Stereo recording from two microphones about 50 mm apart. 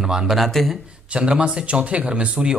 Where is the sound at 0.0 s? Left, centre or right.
Centre.